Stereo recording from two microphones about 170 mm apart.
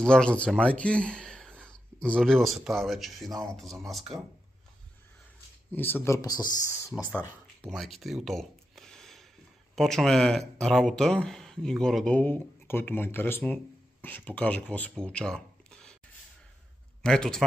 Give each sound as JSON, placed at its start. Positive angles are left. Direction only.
{"t": 0.0, "sound": "speech", "side_deg": 5}
{"t": 5.7, "sound": "speech", "side_deg": 10}
{"t": 7.6, "sound": "a sound", "side_deg": 0}
{"t": 9.8, "sound": "speech", "side_deg": 0}
{"t": 17.0, "sound": "speech", "side_deg": 5}